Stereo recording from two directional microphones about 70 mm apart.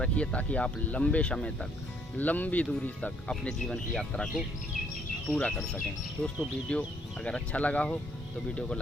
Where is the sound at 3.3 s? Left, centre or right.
Centre.